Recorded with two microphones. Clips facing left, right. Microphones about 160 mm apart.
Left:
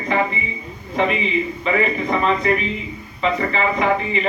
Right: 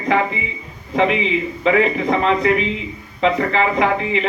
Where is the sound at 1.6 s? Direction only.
90° right.